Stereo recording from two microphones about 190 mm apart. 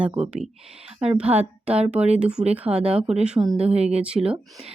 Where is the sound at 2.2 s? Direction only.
5° right (ahead or behind).